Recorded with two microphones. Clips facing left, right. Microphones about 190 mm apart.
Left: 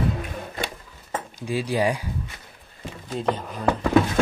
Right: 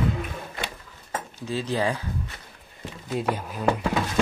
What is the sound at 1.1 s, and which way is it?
Speech, 10° left (ahead or behind).